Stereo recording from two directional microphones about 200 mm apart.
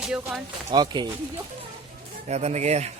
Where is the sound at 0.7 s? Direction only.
20° right (ahead or behind).